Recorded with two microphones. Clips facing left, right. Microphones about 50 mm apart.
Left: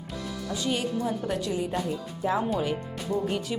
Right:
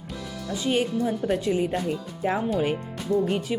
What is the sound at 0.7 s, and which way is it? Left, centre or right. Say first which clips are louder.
Speech: right 5 dB; right.